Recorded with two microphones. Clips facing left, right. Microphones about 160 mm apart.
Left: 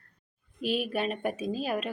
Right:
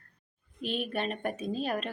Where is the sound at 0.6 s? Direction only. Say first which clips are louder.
Left 3 dB; 5° left (ahead or behind).